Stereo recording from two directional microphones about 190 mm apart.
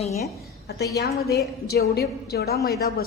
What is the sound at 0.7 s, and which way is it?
A woman's voice, 60° left (ahead or behind).